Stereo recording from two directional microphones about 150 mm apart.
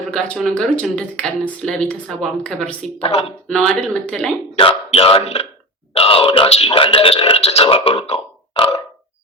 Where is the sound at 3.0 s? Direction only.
40° left (ahead or behind).